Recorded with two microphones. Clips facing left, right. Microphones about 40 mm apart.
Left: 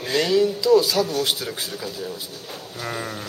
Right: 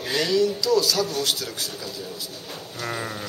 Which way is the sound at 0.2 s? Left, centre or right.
Centre.